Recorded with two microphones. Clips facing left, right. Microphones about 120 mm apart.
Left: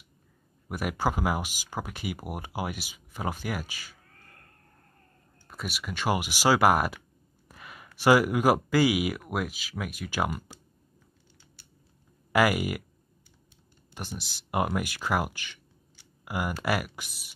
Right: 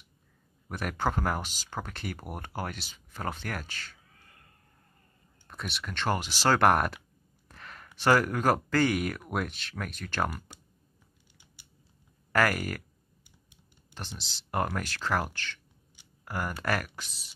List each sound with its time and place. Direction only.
0.7 s speech: 10° left (ahead or behind)
5.5 s speech: 5° left (ahead or behind)
7.4 s a sound: 10° left (ahead or behind)
8.0 s speech: 10° left (ahead or behind)
11.6 s scissors: 15° right (ahead or behind)
12.3 s speech: 10° left (ahead or behind)
13.9 s speech: 10° left (ahead or behind)